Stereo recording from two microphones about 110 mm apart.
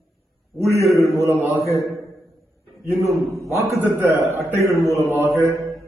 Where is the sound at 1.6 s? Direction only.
30° left (ahead or behind).